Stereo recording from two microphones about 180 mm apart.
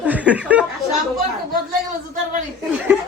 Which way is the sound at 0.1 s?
10° right (ahead or behind).